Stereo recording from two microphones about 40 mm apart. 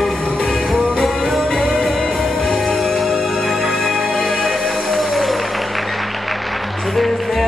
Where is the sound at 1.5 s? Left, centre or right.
Centre.